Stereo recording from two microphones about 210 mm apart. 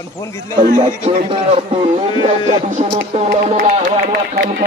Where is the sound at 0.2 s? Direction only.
15° left (ahead or behind).